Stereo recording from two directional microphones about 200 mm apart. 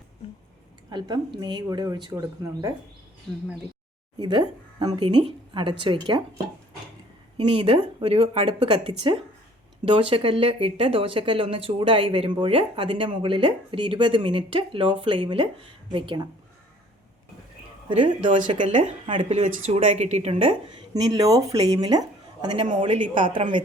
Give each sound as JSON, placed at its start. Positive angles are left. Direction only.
{"t": 0.9, "sound": "speech", "side_deg": -20}
{"t": 4.2, "sound": "speech", "side_deg": -20}
{"t": 7.3, "sound": "speech", "side_deg": -25}
{"t": 17.8, "sound": "speech", "side_deg": -25}